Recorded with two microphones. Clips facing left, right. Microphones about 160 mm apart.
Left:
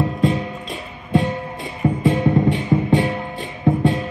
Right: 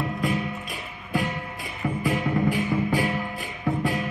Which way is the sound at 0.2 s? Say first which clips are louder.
Left 6 dB; 25° left (ahead or behind).